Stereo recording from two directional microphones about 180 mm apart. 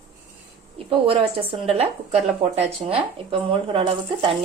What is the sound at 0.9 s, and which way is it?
Speech, 30° right (ahead or behind).